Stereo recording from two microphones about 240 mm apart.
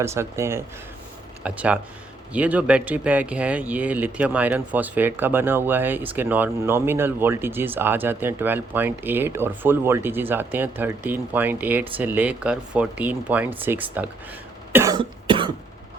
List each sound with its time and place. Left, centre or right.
0.0 s speech: centre
14.7 s cough: centre